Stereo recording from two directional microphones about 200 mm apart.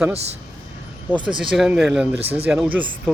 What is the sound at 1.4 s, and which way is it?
Speech, 5° right (ahead or behind).